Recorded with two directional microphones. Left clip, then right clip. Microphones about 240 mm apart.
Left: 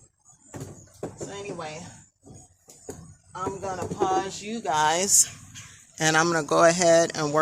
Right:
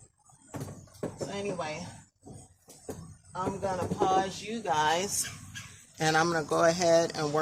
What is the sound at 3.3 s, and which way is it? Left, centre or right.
Speech, left.